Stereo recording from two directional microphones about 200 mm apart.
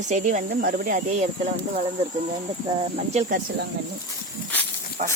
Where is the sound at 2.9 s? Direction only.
35° right (ahead or behind).